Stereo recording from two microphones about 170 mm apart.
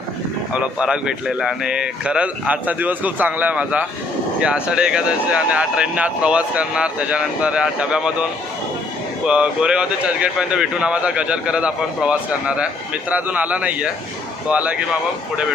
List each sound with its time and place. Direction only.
0.5 s speech: 5° right (ahead or behind)
9.2 s speech: 5° right (ahead or behind)